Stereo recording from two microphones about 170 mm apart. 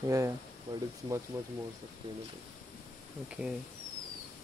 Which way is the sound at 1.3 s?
15° right (ahead or behind).